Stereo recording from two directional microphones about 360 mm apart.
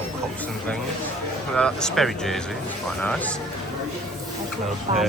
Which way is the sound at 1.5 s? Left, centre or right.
Centre.